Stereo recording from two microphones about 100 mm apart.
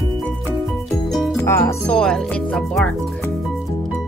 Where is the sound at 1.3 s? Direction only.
25° left (ahead or behind).